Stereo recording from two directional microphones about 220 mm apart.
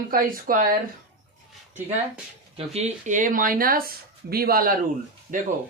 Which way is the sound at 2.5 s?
30° right (ahead or behind).